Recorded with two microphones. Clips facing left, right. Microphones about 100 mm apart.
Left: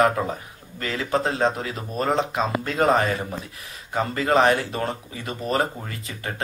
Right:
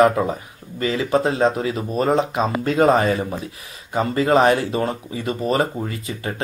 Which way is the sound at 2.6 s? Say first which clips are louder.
Right 6 dB; 25° right (ahead or behind).